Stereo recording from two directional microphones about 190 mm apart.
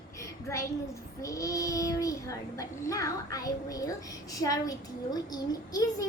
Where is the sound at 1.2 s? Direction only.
15° left (ahead or behind).